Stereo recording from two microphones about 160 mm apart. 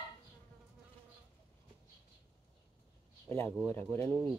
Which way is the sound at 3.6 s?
15° left (ahead or behind).